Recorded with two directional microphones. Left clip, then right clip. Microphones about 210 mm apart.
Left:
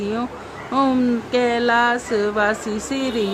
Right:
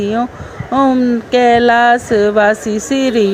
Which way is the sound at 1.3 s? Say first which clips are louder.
Right 10 dB; 25° right (ahead or behind).